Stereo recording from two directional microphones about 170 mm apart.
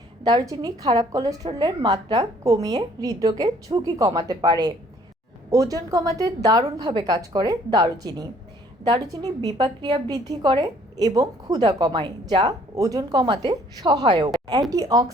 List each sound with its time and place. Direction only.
0.3 s a woman's voice: 20° right (ahead or behind)
14.3 s a sound: 25° right (ahead or behind)
14.7 s a woman's voice: 20° right (ahead or behind)